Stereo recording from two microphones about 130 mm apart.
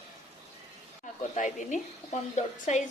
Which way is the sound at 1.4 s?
75° left (ahead or behind).